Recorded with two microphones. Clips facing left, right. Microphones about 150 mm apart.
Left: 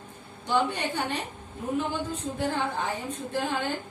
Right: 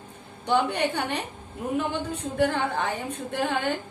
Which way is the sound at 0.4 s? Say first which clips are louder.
Right 3 dB; 65° right (ahead or behind).